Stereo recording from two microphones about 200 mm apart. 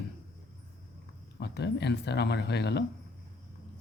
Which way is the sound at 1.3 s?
55° left (ahead or behind).